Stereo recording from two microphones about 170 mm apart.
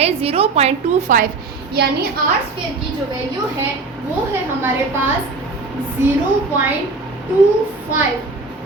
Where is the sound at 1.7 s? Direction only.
70° right (ahead or behind).